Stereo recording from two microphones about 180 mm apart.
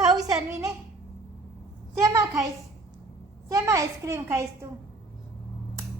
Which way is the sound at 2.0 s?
15° right (ahead or behind).